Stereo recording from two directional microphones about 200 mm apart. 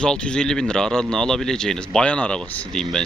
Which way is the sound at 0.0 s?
5° left (ahead or behind).